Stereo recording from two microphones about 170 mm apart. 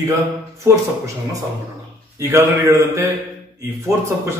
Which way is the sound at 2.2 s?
15° right (ahead or behind).